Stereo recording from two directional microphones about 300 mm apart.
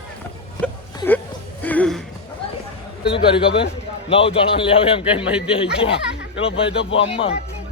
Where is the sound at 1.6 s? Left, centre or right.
Centre.